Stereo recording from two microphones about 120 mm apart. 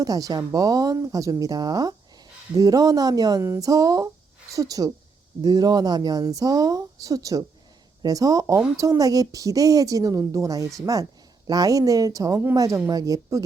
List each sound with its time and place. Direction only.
0.0 s a woman's voice: 30° right (ahead or behind)